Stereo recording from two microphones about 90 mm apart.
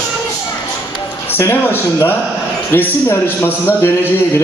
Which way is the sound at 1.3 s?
25° left (ahead or behind).